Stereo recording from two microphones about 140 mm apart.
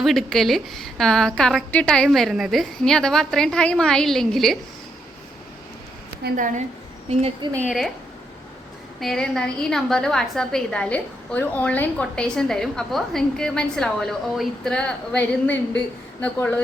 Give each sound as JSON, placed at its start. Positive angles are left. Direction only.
{"t": 0.0, "sound": "a woman's voice", "side_deg": 0}
{"t": 6.3, "sound": "a woman's voice", "side_deg": -70}
{"t": 7.4, "sound": "a woman's voice", "side_deg": -35}
{"t": 9.0, "sound": "a woman's voice", "side_deg": 0}